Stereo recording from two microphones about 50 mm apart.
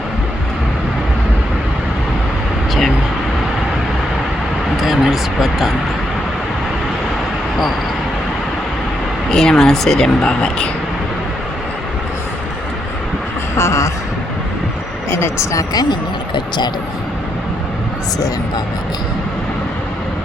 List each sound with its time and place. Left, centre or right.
4.8 s a sound: centre
9.3 s speech: centre
10.2 s speech: left
13.6 s speech: left
15.1 s speech: left